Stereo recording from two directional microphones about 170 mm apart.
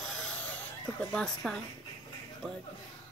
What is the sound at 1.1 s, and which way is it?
Speech, 5° left (ahead or behind).